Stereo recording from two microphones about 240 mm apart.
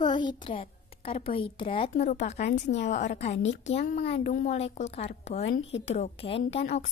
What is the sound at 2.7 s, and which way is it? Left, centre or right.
Speech, left.